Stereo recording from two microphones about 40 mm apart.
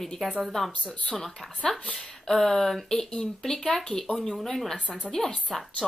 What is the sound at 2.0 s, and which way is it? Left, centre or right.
A woman's voice, centre.